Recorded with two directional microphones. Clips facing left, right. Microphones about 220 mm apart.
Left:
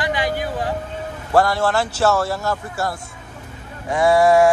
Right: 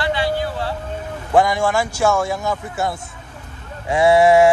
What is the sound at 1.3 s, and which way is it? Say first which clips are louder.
Male singing: right 1 dB; 15° right (ahead or behind).